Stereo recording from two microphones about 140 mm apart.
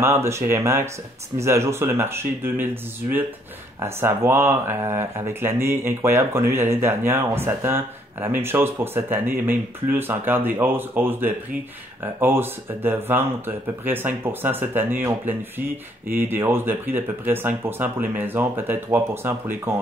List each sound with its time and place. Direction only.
0.0 s speech: 20° right (ahead or behind)